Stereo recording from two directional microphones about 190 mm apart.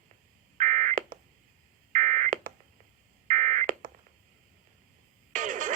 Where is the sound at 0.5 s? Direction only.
40° right (ahead or behind).